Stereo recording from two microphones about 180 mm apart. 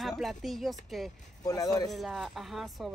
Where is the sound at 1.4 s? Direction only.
20° left (ahead or behind).